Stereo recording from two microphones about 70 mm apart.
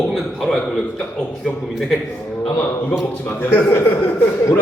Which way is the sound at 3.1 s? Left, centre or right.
Left.